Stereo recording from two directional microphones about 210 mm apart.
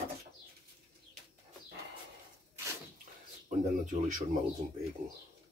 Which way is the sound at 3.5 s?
40° right (ahead or behind).